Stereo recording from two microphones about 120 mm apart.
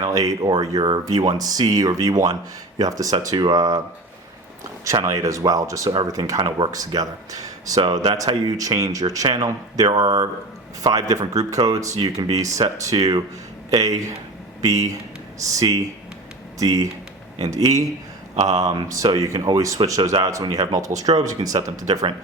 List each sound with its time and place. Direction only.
0.0 s speech: 30° right (ahead or behind)
4.9 s speech: 30° right (ahead or behind)
18.3 s speech: 75° right (ahead or behind)
18.9 s speech: 30° right (ahead or behind)